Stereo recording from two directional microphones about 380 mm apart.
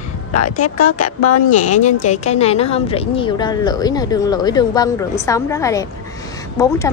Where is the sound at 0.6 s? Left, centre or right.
Left.